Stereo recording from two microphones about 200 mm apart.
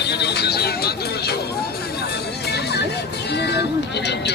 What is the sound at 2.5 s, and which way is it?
Music, 55° left (ahead or behind).